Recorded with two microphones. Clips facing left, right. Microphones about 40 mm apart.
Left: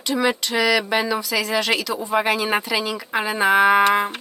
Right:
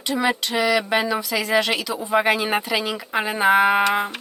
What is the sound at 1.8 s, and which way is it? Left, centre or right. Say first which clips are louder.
Speech: right 1 dB; centre.